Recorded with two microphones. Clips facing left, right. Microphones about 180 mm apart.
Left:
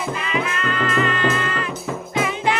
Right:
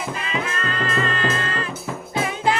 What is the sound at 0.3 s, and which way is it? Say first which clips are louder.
Music: left 3 dB; 35° right (ahead or behind).